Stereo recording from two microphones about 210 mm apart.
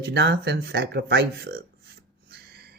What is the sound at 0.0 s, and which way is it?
Speech, 55° right (ahead or behind).